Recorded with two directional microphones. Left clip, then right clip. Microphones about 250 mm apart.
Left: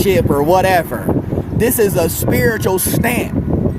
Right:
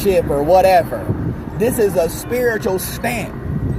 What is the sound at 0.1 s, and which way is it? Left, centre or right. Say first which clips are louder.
Speech: right 1 dB; left.